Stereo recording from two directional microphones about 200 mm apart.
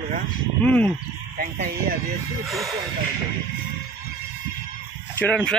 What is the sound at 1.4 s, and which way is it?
Speech, 50° right (ahead or behind).